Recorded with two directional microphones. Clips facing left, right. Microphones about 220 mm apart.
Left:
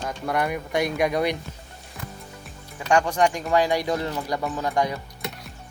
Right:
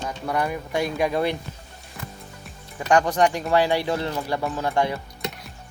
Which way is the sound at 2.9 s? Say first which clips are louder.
Right 1 dB; 35° right (ahead or behind).